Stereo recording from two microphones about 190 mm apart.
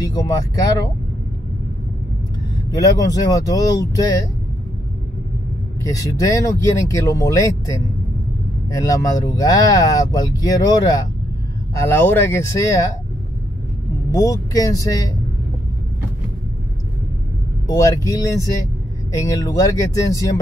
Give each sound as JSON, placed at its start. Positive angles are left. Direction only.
{"t": 0.0, "sound": "speech", "side_deg": 20}
{"t": 2.7, "sound": "speech", "side_deg": 15}
{"t": 5.8, "sound": "speech", "side_deg": 15}
{"t": 14.1, "sound": "speech", "side_deg": 15}
{"t": 17.6, "sound": "speech", "side_deg": 15}